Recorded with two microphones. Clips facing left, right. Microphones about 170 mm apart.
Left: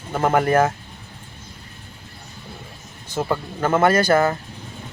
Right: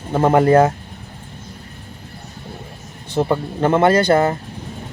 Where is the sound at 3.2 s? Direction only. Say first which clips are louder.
Right 5 dB; 25° right (ahead or behind).